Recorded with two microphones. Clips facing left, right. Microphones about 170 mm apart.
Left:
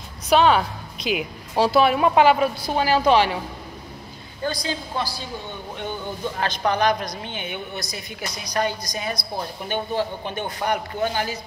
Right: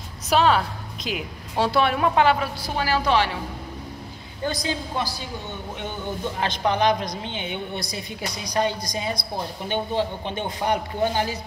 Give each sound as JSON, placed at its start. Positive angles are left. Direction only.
{"t": 0.3, "sound": "a woman's voice", "side_deg": 0}
{"t": 4.5, "sound": "speech", "side_deg": -20}
{"t": 6.4, "sound": "speech", "side_deg": -20}